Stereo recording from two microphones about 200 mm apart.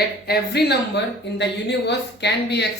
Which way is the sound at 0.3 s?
55° left (ahead or behind).